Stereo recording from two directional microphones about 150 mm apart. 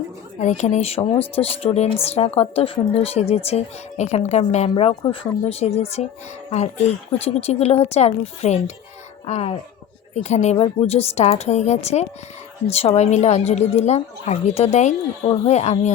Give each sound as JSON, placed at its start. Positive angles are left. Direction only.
{"t": 0.3, "sound": "speech", "side_deg": 50}
{"t": 4.7, "sound": "speech", "side_deg": 35}